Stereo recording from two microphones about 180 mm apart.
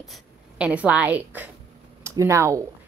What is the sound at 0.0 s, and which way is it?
A woman's voice, 5° right (ahead or behind).